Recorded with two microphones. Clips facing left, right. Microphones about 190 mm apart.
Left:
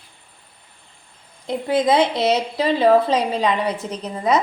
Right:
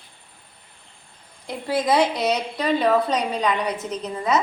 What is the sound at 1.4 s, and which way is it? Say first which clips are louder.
A woman's voice: left 4 dB; 20° left (ahead or behind).